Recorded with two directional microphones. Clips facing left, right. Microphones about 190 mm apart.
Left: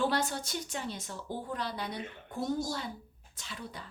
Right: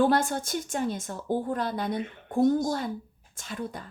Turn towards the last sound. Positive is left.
turn(degrees=-50)  # may be behind; listen again after turning